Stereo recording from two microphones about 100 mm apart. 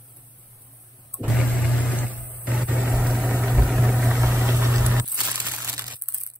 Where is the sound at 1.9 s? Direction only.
15° left (ahead or behind).